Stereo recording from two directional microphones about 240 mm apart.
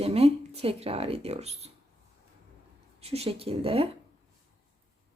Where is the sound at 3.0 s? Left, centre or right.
Right.